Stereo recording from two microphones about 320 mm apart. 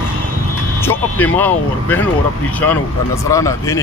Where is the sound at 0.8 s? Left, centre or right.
Centre.